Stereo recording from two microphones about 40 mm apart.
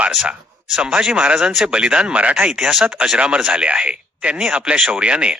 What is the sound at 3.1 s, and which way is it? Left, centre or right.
A man's voice, right.